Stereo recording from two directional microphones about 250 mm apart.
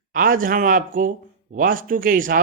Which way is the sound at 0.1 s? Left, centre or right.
Right.